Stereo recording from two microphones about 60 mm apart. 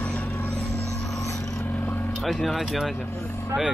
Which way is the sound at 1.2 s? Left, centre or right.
Left.